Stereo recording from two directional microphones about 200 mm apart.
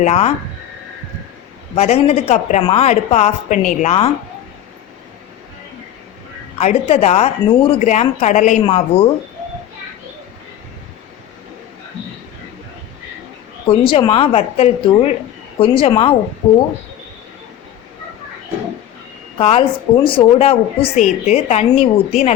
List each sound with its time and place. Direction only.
0.0 s a woman's voice: 35° left (ahead or behind)
1.7 s a woman's voice: 30° left (ahead or behind)
6.6 s a woman's voice: 35° left (ahead or behind)
13.7 s a woman's voice: 25° left (ahead or behind)
19.4 s a woman's voice: 30° left (ahead or behind)